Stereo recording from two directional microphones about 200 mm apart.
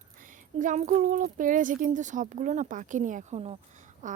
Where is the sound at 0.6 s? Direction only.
40° right (ahead or behind).